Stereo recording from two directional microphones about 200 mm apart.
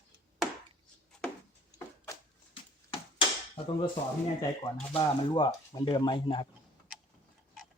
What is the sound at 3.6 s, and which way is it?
Speech, 25° left (ahead or behind).